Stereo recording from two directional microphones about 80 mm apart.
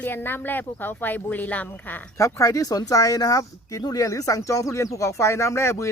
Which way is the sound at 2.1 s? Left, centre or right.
Left.